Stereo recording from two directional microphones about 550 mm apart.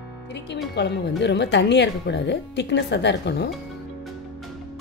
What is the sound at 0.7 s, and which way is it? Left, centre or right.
Speech, centre.